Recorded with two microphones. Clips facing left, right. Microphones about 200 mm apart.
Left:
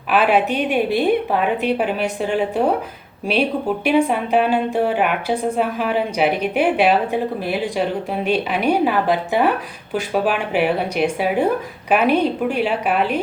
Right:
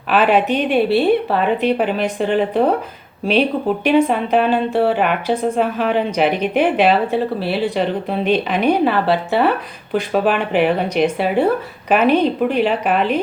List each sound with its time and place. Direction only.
0.1 s a woman's voice: 10° left (ahead or behind)
3.8 s a woman's voice: 10° left (ahead or behind)